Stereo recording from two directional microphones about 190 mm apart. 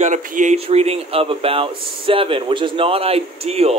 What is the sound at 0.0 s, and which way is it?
Speech, 45° right (ahead or behind).